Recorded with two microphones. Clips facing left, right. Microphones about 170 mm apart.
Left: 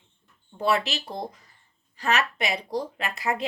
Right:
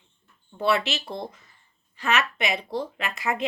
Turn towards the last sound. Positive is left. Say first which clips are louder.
# right 1 dB
turn(degrees=35)  # may be behind; listen again after turning